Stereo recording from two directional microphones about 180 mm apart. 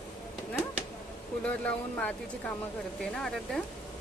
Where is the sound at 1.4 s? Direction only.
10° left (ahead or behind).